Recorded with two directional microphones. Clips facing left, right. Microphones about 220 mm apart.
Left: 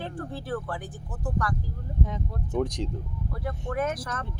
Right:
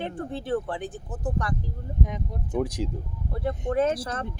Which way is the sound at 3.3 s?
25° right (ahead or behind).